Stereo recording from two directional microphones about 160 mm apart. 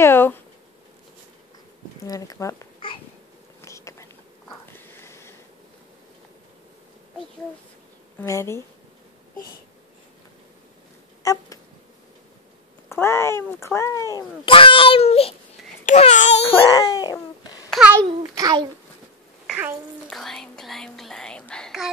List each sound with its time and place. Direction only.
0.0 s speech: 15° left (ahead or behind)
2.0 s speech: 20° left (ahead or behind)
3.6 s insect: 20° left (ahead or behind)
4.7 s a sound: 15° left (ahead or behind)
8.2 s speech: 15° left (ahead or behind)
11.2 s a sound: 20° left (ahead or behind)
12.9 s speech: 15° left (ahead or behind)
14.4 s a child's voice: 35° left (ahead or behind)
16.7 s a sound: 25° left (ahead or behind)
17.6 s babbling: 5° right (ahead or behind)
18.0 s a child's voice: 25° right (ahead or behind)
19.4 s a sound: 5° right (ahead or behind)
20.1 s speech: 5° left (ahead or behind)